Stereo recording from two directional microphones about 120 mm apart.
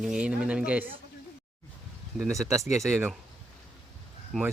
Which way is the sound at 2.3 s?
25° right (ahead or behind).